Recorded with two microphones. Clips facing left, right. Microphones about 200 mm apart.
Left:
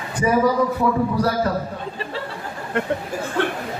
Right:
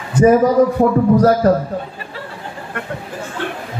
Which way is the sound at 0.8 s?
45° right (ahead or behind).